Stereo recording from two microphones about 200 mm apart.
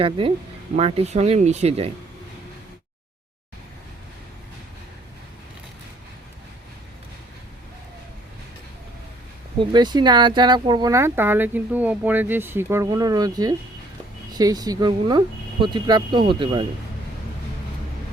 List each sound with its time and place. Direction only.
0.0 s speech: 25° right (ahead or behind)
9.6 s speech: 20° right (ahead or behind)